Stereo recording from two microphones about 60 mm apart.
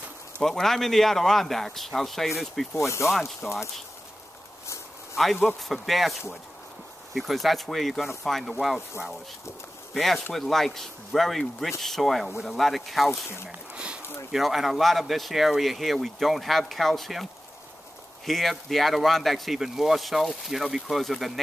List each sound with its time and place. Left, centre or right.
0.4 s speech: centre
2.7 s speech: left
3.4 s speech: centre
5.1 s speech: centre
7.2 s speech: centre
9.9 s speech: centre
13.7 s a sound: centre
14.3 s speech: centre